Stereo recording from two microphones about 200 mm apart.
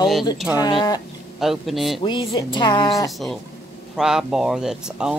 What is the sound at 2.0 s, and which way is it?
Speech, 25° left (ahead or behind).